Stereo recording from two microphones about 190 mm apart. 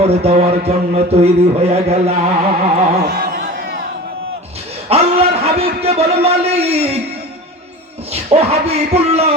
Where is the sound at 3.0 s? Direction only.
55° right (ahead or behind).